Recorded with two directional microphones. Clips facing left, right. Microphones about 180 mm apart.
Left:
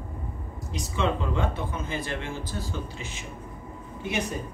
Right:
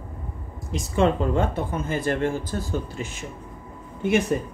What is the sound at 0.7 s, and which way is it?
Speech, 50° right (ahead or behind).